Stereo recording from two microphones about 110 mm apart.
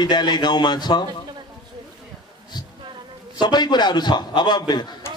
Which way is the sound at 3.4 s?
40° left (ahead or behind).